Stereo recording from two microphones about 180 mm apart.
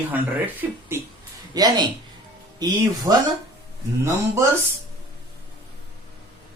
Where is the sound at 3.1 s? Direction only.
20° right (ahead or behind).